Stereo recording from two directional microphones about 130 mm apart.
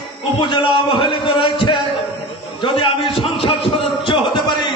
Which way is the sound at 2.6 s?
40° left (ahead or behind).